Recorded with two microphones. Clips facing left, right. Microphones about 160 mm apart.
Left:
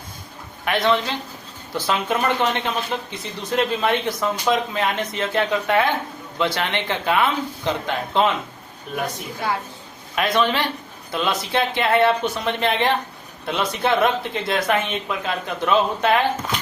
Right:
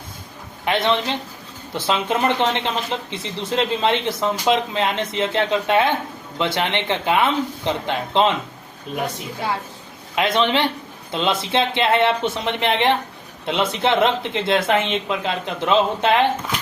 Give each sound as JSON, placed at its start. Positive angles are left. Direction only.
{"t": 0.6, "sound": "speech", "side_deg": -25}
{"t": 10.2, "sound": "speech", "side_deg": -20}